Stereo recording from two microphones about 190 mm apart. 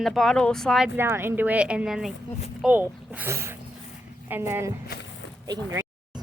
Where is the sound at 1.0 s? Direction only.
10° right (ahead or behind).